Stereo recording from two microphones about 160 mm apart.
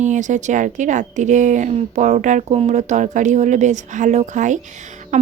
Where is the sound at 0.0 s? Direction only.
50° right (ahead or behind).